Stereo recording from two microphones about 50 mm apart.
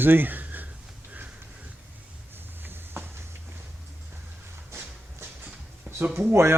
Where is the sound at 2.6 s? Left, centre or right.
Right.